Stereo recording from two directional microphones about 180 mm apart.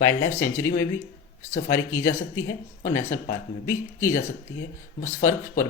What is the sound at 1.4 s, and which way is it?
Speech, 45° left (ahead or behind).